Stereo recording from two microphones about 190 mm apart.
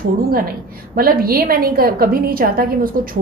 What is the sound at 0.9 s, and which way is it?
A woman's voice, 50° right (ahead or behind).